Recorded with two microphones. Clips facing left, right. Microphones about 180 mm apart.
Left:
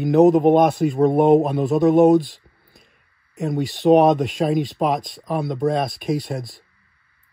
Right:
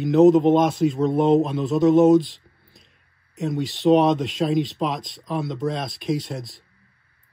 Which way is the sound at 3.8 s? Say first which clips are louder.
Left 3 dB; 45° left (ahead or behind).